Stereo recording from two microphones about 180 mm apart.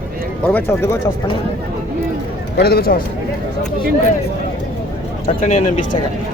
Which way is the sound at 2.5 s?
60° left (ahead or behind).